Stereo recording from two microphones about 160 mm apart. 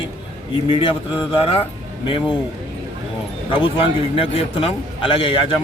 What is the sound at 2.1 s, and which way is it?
Speech, 30° left (ahead or behind).